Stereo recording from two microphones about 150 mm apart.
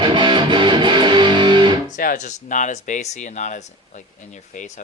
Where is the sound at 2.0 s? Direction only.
65° left (ahead or behind).